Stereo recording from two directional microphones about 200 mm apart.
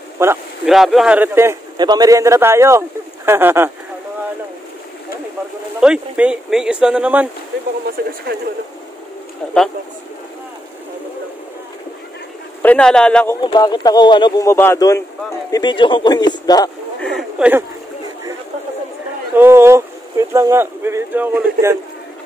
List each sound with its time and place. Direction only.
0.2 s speech: 10° right (ahead or behind)
0.7 s speech: centre (ahead or behind)
5.8 s speech: 5° right (ahead or behind)
9.4 s speech: centre (ahead or behind)
12.6 s speech: 5° left (ahead or behind)
13.4 s a man's voice: 20° left (ahead or behind)
17.0 s speech: centre (ahead or behind)
19.3 s speech: 10° right (ahead or behind)